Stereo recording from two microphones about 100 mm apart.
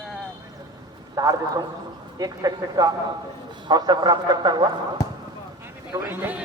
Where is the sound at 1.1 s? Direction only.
40° right (ahead or behind).